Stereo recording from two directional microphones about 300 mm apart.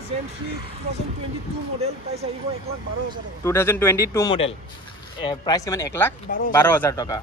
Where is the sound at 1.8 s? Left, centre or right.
Right.